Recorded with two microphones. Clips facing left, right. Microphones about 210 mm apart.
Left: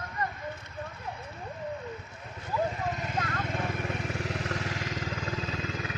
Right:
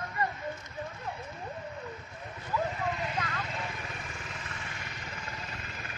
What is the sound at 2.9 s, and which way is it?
Vehicle, 45° left (ahead or behind).